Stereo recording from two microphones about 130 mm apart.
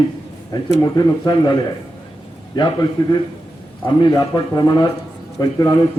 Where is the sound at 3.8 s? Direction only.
30° left (ahead or behind).